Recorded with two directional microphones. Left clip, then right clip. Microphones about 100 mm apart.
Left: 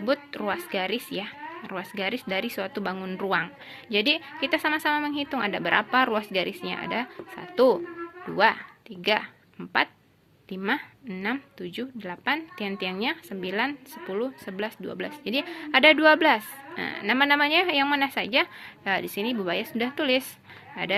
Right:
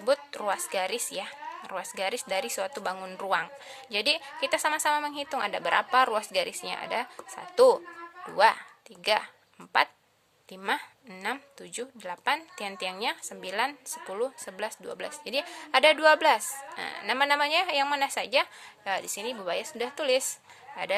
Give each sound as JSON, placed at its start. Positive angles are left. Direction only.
{"t": 0.0, "sound": "a woman's voice", "side_deg": -40}